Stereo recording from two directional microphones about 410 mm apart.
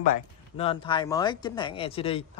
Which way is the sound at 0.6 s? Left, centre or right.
Centre.